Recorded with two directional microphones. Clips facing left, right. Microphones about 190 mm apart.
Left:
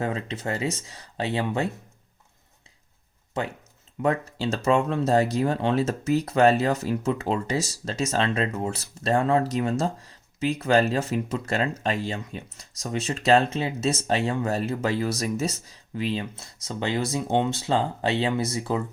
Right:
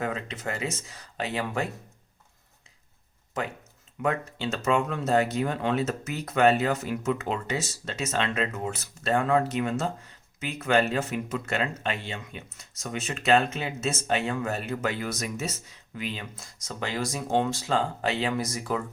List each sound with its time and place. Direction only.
0.0 s speech: 25° left (ahead or behind)
4.0 s speech: 35° left (ahead or behind)